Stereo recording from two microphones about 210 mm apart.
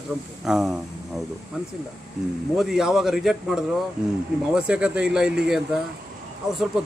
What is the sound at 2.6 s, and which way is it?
A man's voice, centre (ahead or behind).